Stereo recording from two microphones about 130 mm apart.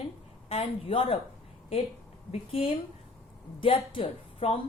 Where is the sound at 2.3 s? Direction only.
45° left (ahead or behind).